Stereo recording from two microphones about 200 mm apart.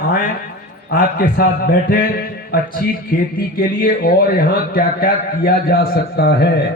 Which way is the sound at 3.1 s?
45° left (ahead or behind).